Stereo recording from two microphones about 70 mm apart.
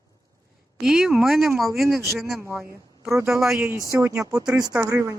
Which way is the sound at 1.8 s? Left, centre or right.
Right.